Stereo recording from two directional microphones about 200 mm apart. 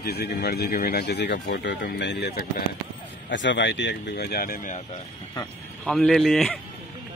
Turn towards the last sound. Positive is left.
turn(degrees=0)  # may be behind; listen again after turning